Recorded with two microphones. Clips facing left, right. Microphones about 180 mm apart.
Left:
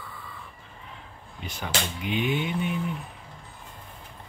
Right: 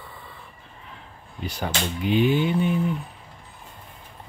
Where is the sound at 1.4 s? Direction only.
35° right (ahead or behind).